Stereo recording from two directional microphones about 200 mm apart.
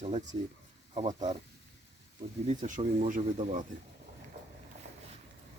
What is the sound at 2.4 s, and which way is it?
Speech, 35° right (ahead or behind).